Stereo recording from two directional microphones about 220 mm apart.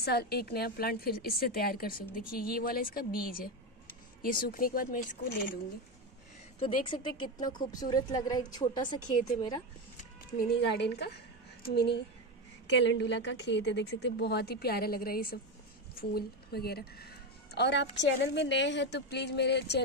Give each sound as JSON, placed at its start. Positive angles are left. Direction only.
{"t": 0.0, "sound": "a woman's voice", "side_deg": 45}
{"t": 6.6, "sound": "a woman's voice", "side_deg": 20}
{"t": 10.6, "sound": "a woman's voice", "side_deg": 50}